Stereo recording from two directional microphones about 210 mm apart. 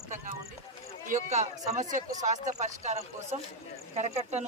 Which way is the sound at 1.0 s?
35° right (ahead or behind).